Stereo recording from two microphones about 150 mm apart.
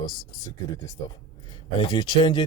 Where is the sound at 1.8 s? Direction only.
35° left (ahead or behind).